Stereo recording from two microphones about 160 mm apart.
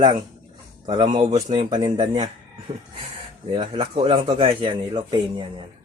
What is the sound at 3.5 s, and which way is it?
Speech, 35° right (ahead or behind).